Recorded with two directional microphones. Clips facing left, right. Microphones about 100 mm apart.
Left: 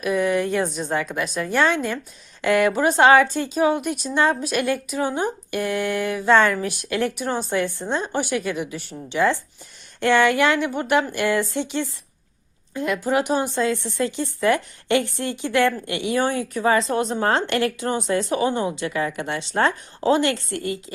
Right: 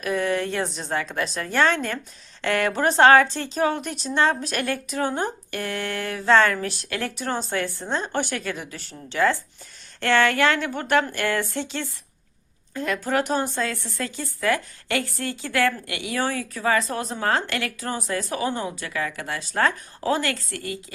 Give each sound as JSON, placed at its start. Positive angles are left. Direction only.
{"t": 0.0, "sound": "speech", "side_deg": 10}